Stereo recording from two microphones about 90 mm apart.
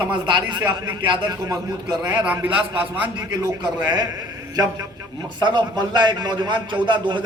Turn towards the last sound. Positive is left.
turn(degrees=-60)  # may be behind; listen again after turning